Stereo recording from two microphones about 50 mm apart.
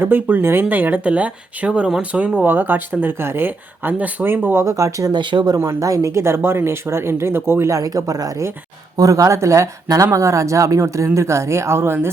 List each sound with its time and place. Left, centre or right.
0.0 s speech: right
2.4 s speech: right
4.5 s speech: right
5.5 s speech: right
9.2 s speech: right